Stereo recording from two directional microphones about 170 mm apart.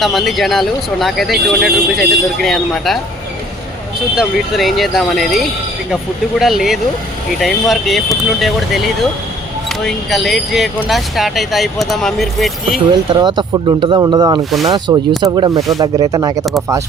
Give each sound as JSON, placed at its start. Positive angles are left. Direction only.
{"t": 0.0, "sound": "speech", "side_deg": 0}
{"t": 4.1, "sound": "speech", "side_deg": 0}
{"t": 12.9, "sound": "speech", "side_deg": -25}